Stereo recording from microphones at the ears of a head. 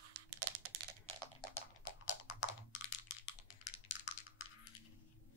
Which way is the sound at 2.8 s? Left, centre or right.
Left.